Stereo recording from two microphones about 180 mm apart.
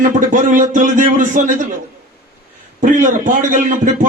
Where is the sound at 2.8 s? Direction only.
45° right (ahead or behind).